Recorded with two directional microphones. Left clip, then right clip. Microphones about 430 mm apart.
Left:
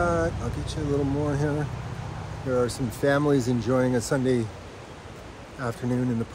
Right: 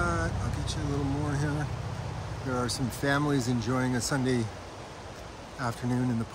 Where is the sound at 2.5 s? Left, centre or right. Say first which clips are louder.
Left 7 dB; centre.